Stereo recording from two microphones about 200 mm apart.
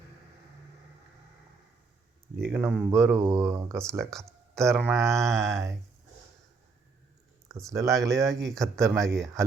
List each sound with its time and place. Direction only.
2.4 s speech: 5° right (ahead or behind)
2.9 s mantra: 15° right (ahead or behind)
3.8 s speech: centre (ahead or behind)
4.8 s mantra: 10° right (ahead or behind)
7.7 s mantra: 15° right (ahead or behind)
8.1 s speech: centre (ahead or behind)